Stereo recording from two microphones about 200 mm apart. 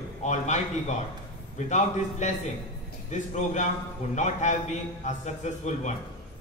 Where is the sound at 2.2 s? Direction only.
35° left (ahead or behind).